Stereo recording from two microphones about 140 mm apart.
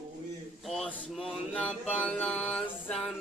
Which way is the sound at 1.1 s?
Centre (ahead or behind).